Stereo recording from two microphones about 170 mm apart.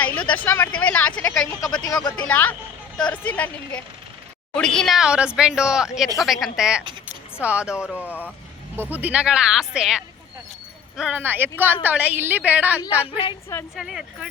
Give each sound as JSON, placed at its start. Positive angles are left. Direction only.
{"t": 0.0, "sound": "speech", "side_deg": 10}
{"t": 1.8, "sound": "speech", "side_deg": 20}
{"t": 2.2, "sound": "speech", "side_deg": 10}
{"t": 7.9, "sound": "speech", "side_deg": 10}
{"t": 8.7, "sound": "a woman's voice", "side_deg": -10}